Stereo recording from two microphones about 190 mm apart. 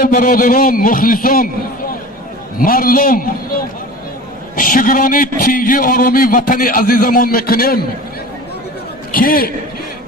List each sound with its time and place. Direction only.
0.0 s a man's voice: 50° left (ahead or behind)
9.1 s a man's voice: 50° left (ahead or behind)